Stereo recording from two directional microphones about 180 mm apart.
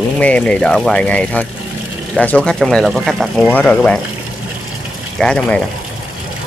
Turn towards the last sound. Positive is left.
turn(degrees=5)  # may be behind; listen again after turning